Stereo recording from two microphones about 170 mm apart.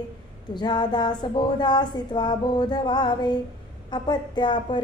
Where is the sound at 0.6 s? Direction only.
25° left (ahead or behind).